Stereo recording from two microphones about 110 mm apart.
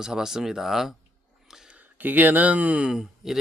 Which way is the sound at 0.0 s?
5° right (ahead or behind).